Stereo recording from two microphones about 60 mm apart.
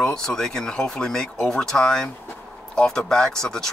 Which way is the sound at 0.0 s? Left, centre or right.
Centre.